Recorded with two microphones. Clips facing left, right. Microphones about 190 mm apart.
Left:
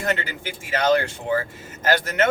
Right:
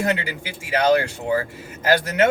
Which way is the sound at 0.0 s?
10° right (ahead or behind).